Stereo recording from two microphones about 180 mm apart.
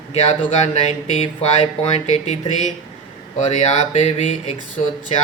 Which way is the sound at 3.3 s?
35° left (ahead or behind).